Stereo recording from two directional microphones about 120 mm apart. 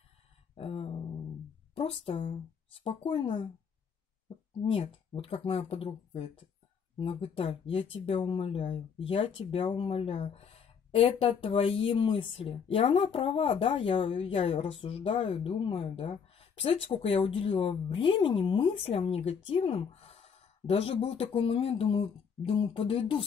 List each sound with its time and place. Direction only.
0.6 s a sound: 55° left (ahead or behind)
1.8 s speech: 55° left (ahead or behind)
4.6 s speech: 50° left (ahead or behind)